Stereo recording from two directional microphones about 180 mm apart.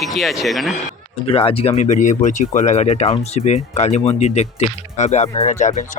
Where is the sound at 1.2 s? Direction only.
30° left (ahead or behind).